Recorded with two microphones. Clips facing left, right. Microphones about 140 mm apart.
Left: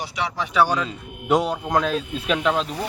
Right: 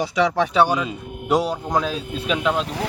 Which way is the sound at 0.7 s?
15° right (ahead or behind).